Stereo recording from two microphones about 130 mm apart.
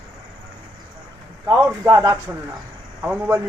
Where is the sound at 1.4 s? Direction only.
20° right (ahead or behind).